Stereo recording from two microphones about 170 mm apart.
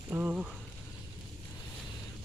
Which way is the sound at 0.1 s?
10° right (ahead or behind).